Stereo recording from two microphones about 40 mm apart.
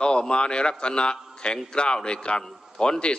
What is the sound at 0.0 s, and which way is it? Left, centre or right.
A man's voice, left.